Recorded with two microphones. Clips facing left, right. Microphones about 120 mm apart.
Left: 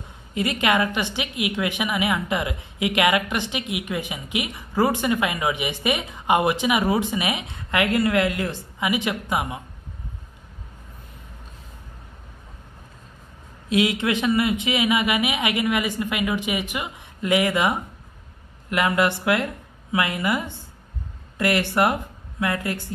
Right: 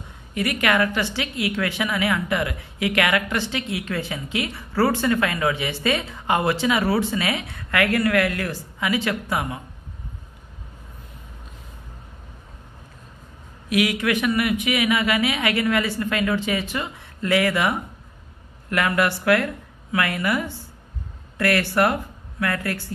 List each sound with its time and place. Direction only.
0.3 s a woman's voice: 20° left (ahead or behind)
13.7 s a woman's voice: 25° left (ahead or behind)